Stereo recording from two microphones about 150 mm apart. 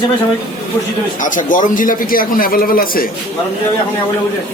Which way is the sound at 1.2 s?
60° left (ahead or behind).